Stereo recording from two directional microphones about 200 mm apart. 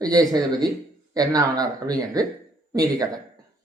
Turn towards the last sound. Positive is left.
turn(degrees=-20)  # may be behind; listen again after turning